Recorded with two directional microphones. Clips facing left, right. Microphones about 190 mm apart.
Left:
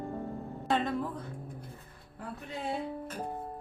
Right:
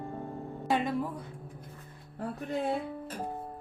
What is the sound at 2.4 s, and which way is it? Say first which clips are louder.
Music: right 6 dB; 50° right (ahead or behind).